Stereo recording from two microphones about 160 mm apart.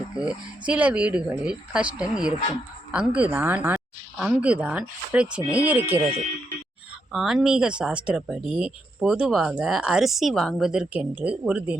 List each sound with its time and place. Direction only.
0.2 s speech: 5° right (ahead or behind)
5.9 s speech: 40° right (ahead or behind)
7.1 s speech: centre (ahead or behind)